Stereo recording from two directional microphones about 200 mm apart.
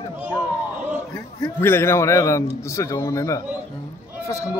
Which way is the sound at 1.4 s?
10° left (ahead or behind).